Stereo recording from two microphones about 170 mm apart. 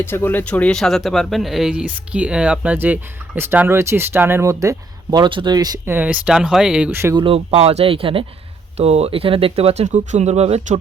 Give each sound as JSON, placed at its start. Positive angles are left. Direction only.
{"t": 0.0, "sound": "speech", "side_deg": 15}
{"t": 7.2, "sound": "speech", "side_deg": -35}